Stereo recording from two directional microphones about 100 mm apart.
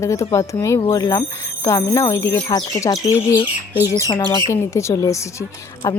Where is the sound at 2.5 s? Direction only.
35° left (ahead or behind).